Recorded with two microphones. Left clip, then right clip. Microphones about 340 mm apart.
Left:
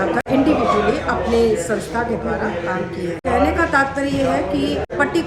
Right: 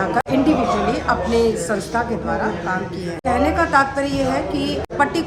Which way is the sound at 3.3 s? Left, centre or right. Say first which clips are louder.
Even; centre.